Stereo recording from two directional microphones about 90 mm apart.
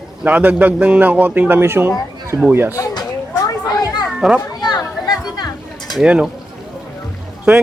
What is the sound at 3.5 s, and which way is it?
Children playing, 45° left (ahead or behind).